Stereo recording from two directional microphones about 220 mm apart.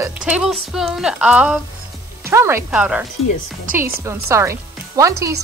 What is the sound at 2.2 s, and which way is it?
Frying, 10° right (ahead or behind).